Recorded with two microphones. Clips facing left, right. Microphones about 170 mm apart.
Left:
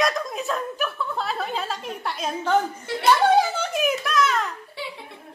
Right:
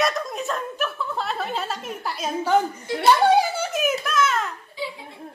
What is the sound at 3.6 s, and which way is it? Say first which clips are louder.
Speech: even; centre (ahead or behind).